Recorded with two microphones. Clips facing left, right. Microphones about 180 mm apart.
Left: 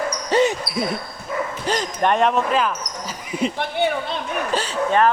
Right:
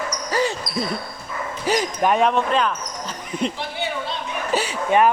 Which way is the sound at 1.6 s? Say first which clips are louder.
Right 2 dB; 10° right (ahead or behind).